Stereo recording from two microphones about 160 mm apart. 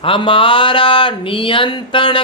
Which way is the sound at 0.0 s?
35° left (ahead or behind).